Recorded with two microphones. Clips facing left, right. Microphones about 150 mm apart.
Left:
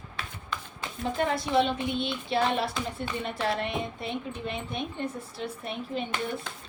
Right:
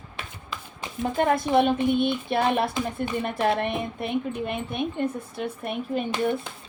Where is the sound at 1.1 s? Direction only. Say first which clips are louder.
Right 5 dB; 55° right (ahead or behind).